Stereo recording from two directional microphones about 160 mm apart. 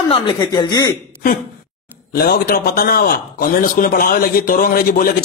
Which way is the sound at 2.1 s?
70° left (ahead or behind).